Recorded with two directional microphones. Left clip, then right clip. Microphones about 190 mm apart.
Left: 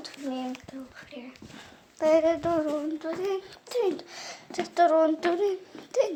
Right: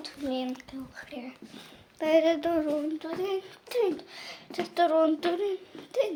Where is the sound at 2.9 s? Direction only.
5° right (ahead or behind).